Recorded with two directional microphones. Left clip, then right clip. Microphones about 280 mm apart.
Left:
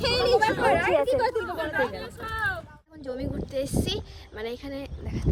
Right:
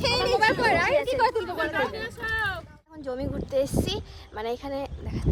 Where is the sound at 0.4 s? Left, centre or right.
Right.